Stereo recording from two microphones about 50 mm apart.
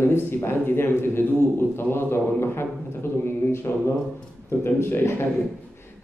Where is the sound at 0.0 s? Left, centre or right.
Left.